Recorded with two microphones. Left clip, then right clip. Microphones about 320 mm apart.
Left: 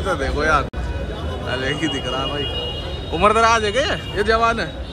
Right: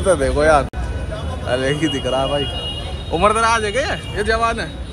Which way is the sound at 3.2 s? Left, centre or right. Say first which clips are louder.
Even; centre.